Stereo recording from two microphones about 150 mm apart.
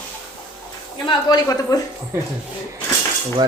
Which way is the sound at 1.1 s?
30° left (ahead or behind).